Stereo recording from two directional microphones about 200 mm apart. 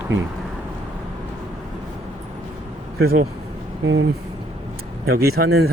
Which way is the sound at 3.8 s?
75° right (ahead or behind).